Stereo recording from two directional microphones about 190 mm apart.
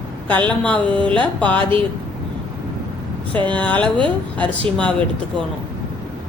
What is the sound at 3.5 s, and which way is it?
Speech, 5° left (ahead or behind).